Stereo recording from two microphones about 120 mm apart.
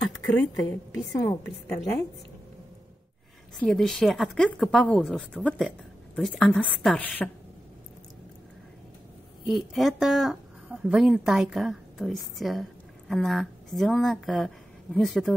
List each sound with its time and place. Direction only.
1.1 s a woman's voice: 25° left (ahead or behind)
3.5 s a woman's voice: 5° left (ahead or behind)
6.8 s a woman's voice: centre (ahead or behind)
9.5 s a woman's voice: centre (ahead or behind)